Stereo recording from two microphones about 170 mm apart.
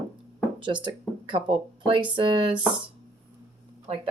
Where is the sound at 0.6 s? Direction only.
30° right (ahead or behind).